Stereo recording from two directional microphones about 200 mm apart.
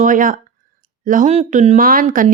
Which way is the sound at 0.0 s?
40° right (ahead or behind).